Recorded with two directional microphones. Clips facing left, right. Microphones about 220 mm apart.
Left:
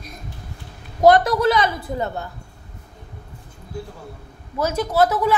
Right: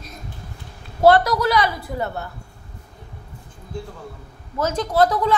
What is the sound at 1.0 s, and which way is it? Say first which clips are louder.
A woman's voice: left 1 dB; 20° left (ahead or behind).